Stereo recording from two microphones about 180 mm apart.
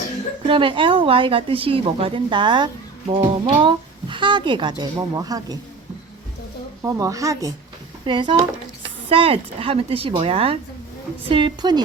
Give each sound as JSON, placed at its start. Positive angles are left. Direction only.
{"t": 0.4, "sound": "speech", "side_deg": -30}
{"t": 6.8, "sound": "speech", "side_deg": -20}